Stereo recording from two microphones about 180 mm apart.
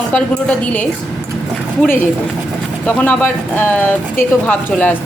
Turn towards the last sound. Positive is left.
turn(degrees=10)  # may be behind; listen again after turning